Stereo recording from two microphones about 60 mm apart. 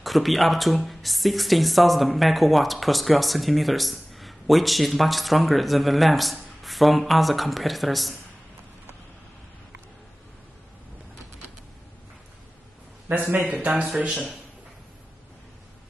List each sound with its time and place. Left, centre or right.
0.0 s speech: centre
13.1 s speech: right